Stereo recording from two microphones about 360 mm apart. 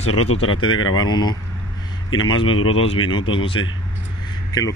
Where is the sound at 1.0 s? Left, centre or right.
Centre.